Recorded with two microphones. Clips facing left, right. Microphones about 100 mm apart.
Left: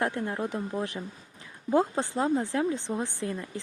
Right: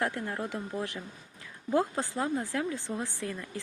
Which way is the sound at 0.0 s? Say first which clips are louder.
Left 3 dB; 20° left (ahead or behind).